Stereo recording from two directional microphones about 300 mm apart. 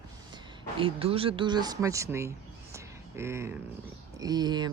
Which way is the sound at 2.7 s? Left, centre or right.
Centre.